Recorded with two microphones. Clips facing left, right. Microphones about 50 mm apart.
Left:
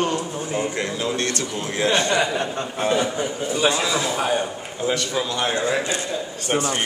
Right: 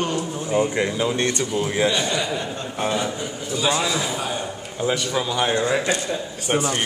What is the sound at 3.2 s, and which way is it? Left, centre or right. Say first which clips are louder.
A man's voice: left 4 dB; left.